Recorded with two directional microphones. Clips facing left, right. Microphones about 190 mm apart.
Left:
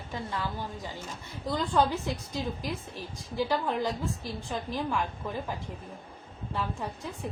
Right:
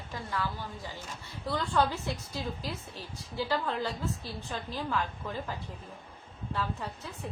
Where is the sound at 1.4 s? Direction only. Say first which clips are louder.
Left 2 dB; 15° left (ahead or behind).